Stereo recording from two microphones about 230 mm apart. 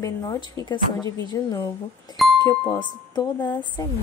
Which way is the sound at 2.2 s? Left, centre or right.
Centre.